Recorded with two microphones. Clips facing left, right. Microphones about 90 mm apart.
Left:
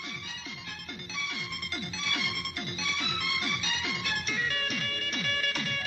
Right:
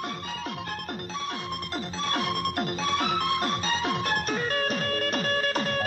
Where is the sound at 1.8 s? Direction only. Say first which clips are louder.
Right 6 dB; 40° right (ahead or behind).